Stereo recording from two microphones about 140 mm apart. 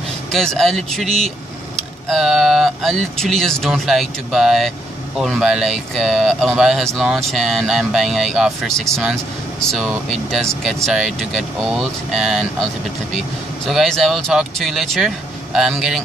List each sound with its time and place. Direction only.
0.3 s speech: 5° left (ahead or behind)
13.7 s speech: centre (ahead or behind)